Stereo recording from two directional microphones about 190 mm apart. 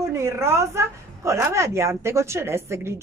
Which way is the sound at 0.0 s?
15° right (ahead or behind).